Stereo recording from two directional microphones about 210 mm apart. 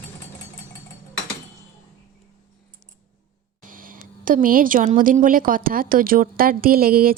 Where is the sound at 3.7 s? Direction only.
40° right (ahead or behind).